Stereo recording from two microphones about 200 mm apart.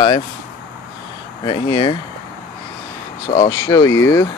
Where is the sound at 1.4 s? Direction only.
25° left (ahead or behind).